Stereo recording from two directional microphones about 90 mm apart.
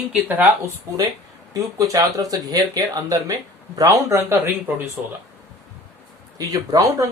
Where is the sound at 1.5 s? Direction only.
45° right (ahead or behind).